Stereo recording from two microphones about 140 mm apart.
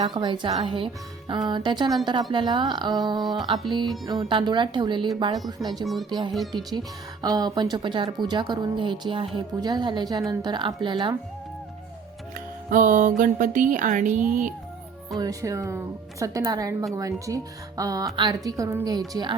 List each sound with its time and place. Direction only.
0.0 s speech: 35° right (ahead or behind)
3.2 s speech: centre (ahead or behind)
3.4 s speech: 35° right (ahead or behind)
5.8 s speech: centre (ahead or behind)
6.1 s speech: 30° right (ahead or behind)
12.7 s music: 65° right (ahead or behind)
15.2 s speech: 25° right (ahead or behind)